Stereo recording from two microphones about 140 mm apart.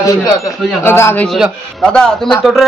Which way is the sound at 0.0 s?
25° left (ahead or behind).